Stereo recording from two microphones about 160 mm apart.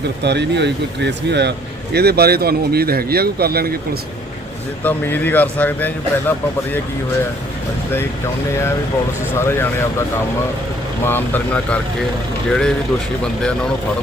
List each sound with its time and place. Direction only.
0.2 s speech: 90° right; by 3.8 s 75° right (ahead or behind)
4.8 s speech: 10° left (ahead or behind)
9.3 s speech: 15° left (ahead or behind)
11.0 s speech: 15° left (ahead or behind)